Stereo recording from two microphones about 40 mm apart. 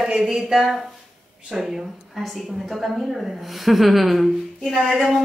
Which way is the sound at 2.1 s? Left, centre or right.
Centre.